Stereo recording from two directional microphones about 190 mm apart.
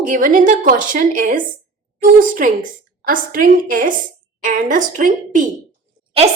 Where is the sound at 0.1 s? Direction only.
45° right (ahead or behind).